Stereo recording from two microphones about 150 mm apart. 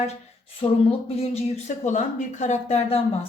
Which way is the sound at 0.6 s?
40° left (ahead or behind).